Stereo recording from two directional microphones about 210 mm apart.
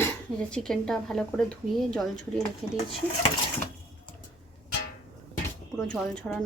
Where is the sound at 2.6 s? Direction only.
Centre (ahead or behind).